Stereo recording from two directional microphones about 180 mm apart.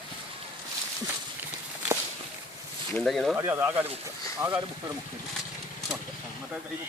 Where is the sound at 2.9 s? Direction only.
Centre (ahead or behind).